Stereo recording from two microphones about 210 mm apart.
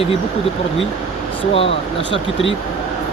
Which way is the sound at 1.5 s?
25° left (ahead or behind).